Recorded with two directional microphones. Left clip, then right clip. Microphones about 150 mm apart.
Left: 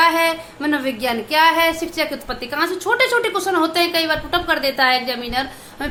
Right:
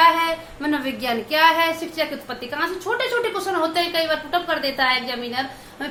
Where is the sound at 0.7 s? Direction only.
25° left (ahead or behind).